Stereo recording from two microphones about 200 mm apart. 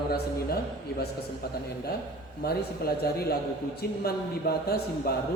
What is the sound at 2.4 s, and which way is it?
Speech, 50° left (ahead or behind).